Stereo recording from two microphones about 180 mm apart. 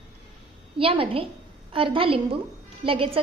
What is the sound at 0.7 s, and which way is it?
A woman's voice, 30° right (ahead or behind).